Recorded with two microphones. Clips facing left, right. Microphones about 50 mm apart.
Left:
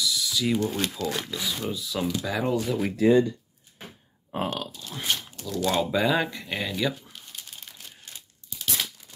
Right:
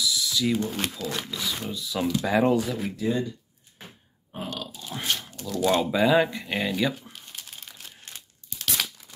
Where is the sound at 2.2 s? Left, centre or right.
Right.